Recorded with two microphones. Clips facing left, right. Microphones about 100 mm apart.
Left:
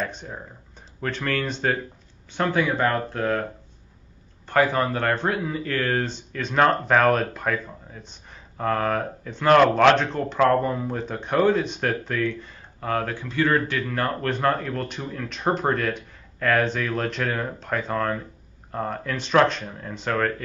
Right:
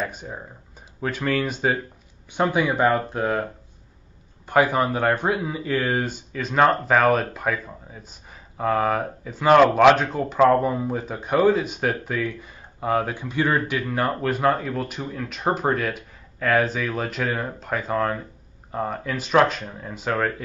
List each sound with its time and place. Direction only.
0.0 s speech: 10° right (ahead or behind)
4.5 s speech: 15° right (ahead or behind)